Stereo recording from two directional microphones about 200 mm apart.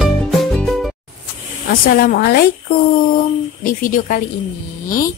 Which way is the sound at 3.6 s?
45° left (ahead or behind).